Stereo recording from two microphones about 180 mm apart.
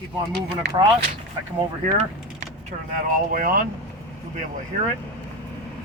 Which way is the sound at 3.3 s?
50° right (ahead or behind).